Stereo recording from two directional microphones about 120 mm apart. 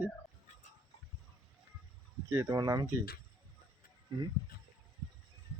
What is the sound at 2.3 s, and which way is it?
Speech, 30° right (ahead or behind).